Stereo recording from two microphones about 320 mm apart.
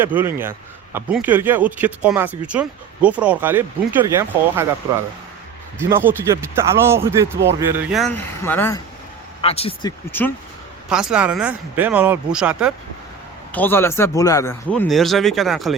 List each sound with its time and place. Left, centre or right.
0.0 s speech: centre
5.8 s speech: centre
9.4 s speech: centre
10.1 s speech: centre